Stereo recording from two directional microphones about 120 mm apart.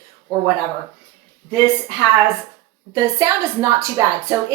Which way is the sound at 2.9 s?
25° right (ahead or behind).